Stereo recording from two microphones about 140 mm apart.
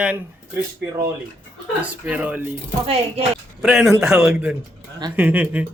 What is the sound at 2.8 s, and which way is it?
Speech, 45° right (ahead or behind).